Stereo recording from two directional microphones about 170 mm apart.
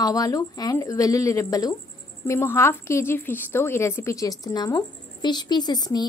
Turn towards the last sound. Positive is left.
turn(degrees=25)  # may be behind; listen again after turning